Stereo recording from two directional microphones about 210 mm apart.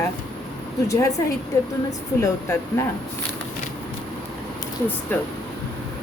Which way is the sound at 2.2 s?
15° left (ahead or behind).